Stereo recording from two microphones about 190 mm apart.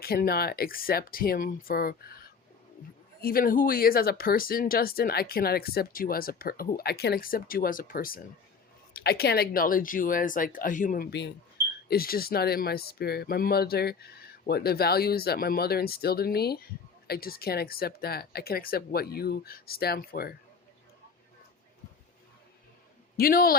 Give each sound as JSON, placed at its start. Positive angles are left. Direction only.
{"t": 0.0, "sound": "speech", "side_deg": 50}
{"t": 23.1, "sound": "a man's voice", "side_deg": 50}